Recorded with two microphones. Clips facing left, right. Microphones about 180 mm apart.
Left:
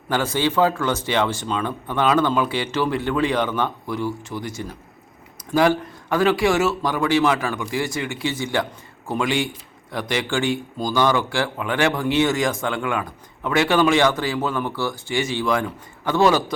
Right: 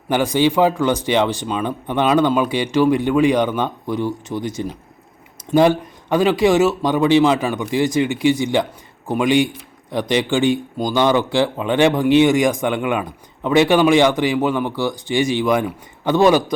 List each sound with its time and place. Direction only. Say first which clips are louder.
0.1 s speech: right 5 dB; 15° right (ahead or behind)